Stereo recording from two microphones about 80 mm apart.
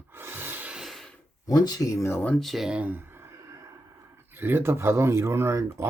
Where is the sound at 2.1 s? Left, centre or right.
Left.